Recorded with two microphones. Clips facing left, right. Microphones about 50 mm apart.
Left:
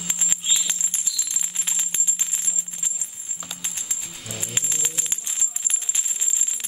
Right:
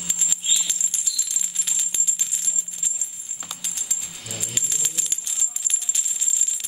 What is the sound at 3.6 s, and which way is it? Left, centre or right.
Music, left.